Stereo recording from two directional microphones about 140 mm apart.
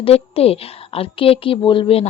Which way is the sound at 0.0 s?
45° left (ahead or behind).